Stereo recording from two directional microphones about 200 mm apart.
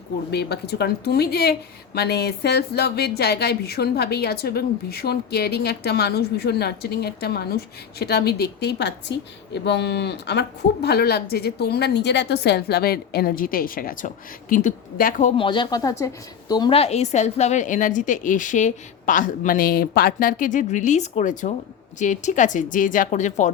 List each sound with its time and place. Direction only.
0.3 s speech: 55° left (ahead or behind)
15.4 s a woman's voice: 25° left (ahead or behind)